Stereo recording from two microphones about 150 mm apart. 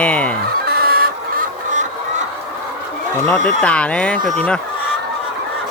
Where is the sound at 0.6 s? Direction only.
90° right.